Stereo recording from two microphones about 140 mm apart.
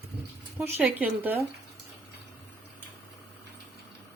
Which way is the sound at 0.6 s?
15° right (ahead or behind).